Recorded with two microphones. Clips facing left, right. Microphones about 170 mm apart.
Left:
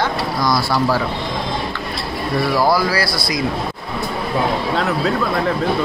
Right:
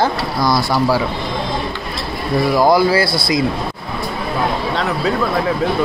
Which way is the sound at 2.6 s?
20° right (ahead or behind).